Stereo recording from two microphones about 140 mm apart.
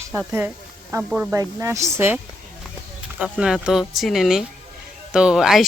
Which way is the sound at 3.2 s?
5° right (ahead or behind).